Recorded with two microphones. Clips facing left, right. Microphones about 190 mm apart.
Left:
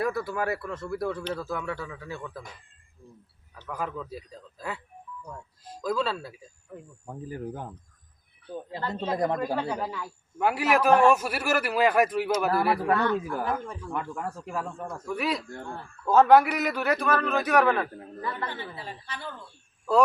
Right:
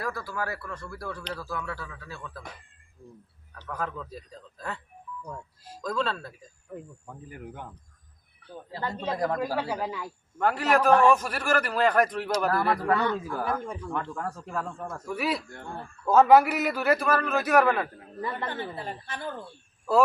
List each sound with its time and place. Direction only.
0.0 s speech: 20° left (ahead or behind)
3.7 s a man's voice: 10° left (ahead or behind)
5.8 s a man's voice: 5° left (ahead or behind)
7.1 s speech: 35° left (ahead or behind)
8.9 s speech: 20° left (ahead or behind)
9.6 s a man's voice: 10° right (ahead or behind)
10.3 s a man's voice: 10° left (ahead or behind)
14.8 s a man's voice: 5° right (ahead or behind)
18.4 s a woman's voice: 50° right (ahead or behind)